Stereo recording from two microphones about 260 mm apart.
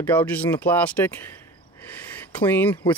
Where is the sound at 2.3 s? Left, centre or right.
Centre.